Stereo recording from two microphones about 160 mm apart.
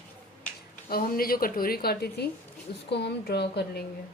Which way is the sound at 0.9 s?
65° left (ahead or behind).